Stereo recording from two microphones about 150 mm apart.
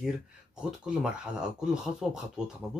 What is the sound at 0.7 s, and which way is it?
Speech, 5° right (ahead or behind).